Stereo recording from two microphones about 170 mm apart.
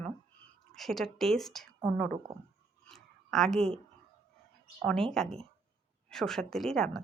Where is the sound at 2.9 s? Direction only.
Centre (ahead or behind).